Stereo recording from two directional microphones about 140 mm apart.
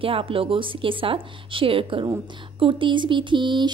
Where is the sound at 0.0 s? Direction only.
40° right (ahead or behind).